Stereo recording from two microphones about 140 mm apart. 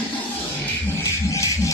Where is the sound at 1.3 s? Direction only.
20° left (ahead or behind).